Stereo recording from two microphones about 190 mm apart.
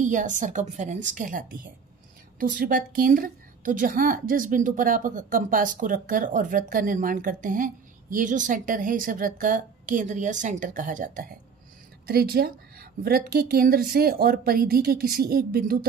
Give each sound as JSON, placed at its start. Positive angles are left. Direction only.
{"t": 0.0, "sound": "a woman's voice", "side_deg": -40}
{"t": 12.1, "sound": "a woman's voice", "side_deg": -55}